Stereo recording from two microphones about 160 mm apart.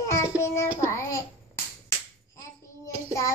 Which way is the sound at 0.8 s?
20° left (ahead or behind).